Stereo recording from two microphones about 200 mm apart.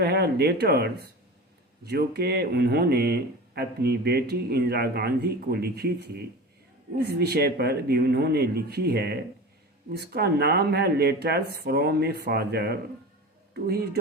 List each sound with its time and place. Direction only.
0.0 s speech: 55° right (ahead or behind)